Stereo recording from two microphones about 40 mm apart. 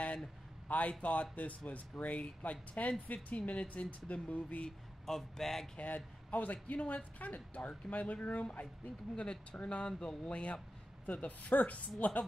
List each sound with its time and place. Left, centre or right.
0.7 s speech: left
5.0 s a man's voice: centre
5.8 s speech: left
11.1 s speech: left